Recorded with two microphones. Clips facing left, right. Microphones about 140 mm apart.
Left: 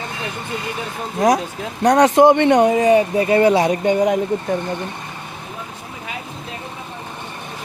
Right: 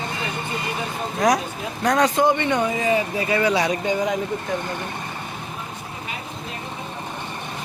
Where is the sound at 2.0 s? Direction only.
75° left (ahead or behind).